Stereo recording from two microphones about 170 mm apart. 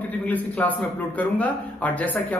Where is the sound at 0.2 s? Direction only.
10° left (ahead or behind).